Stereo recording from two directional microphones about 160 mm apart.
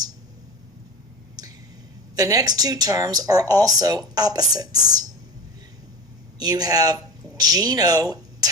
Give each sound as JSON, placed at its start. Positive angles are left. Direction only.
{"t": 2.1, "sound": "speech", "side_deg": -25}
{"t": 6.4, "sound": "speech", "side_deg": -25}